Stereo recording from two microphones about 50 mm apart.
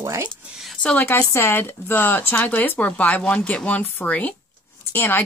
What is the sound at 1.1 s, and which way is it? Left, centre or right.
Speech, left.